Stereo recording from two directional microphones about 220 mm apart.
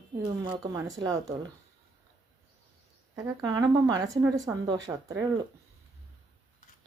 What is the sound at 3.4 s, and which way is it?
A woman's voice, 15° right (ahead or behind).